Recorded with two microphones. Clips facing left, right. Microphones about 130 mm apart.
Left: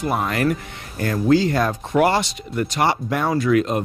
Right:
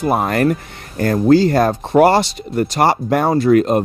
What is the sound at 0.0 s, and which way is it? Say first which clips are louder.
Speech: right 5 dB; 45° right (ahead or behind).